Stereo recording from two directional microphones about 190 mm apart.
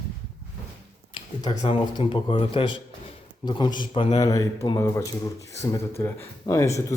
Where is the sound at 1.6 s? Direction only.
25° left (ahead or behind).